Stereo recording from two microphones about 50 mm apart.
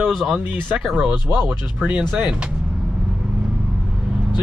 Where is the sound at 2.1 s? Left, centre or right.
Right.